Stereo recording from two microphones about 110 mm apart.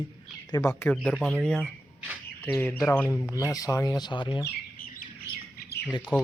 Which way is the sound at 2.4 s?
15° left (ahead or behind).